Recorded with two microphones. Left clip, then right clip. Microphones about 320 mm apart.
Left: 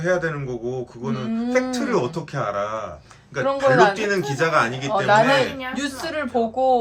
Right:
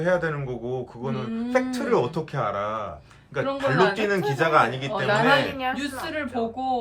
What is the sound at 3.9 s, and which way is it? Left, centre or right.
Speech, centre.